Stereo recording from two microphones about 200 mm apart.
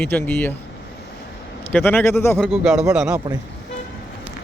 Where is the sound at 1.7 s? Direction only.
10° left (ahead or behind).